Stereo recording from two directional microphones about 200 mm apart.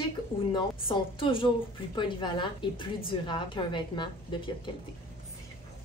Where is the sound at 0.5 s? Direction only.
25° left (ahead or behind).